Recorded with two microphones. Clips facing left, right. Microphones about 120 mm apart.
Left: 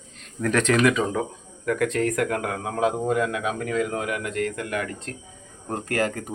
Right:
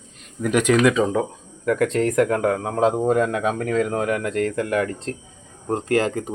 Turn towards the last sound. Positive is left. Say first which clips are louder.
# right 5 dB
turn(degrees=-20)  # may be behind; listen again after turning